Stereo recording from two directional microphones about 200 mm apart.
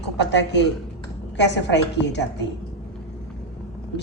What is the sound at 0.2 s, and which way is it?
A woman's voice, 60° left (ahead or behind).